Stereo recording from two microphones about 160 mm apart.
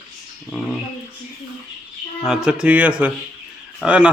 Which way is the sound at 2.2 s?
5° right (ahead or behind).